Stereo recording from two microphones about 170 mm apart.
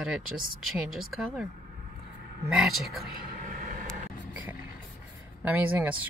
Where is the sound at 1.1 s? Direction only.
5° right (ahead or behind).